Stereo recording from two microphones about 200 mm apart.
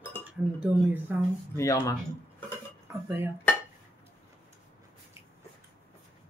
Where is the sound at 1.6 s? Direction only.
15° left (ahead or behind).